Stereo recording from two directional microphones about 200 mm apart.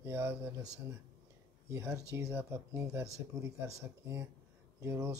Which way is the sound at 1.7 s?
15° right (ahead or behind).